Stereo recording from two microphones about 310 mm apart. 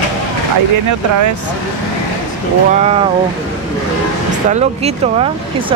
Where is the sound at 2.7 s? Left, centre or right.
Right.